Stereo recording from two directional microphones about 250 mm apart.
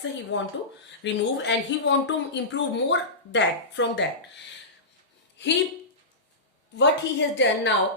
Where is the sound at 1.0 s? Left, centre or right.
Left.